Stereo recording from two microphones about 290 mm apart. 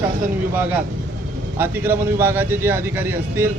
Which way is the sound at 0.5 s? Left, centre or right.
Centre.